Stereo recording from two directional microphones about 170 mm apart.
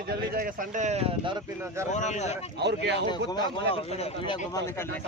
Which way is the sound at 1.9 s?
45° left (ahead or behind).